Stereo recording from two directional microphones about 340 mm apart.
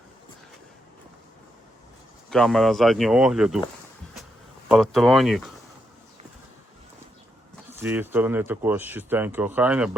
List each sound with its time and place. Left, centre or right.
2.3 s speech: centre
4.7 s speech: centre
7.5 s speech: centre